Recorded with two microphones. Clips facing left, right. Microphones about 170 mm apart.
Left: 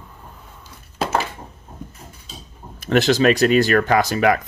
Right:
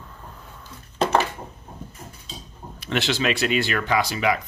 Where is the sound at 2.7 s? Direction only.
45° left (ahead or behind).